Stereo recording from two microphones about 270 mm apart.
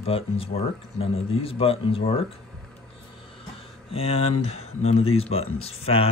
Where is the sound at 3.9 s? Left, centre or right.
Left.